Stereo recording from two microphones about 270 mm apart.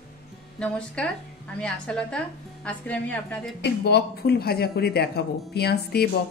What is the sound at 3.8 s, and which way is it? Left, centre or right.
Speech, left.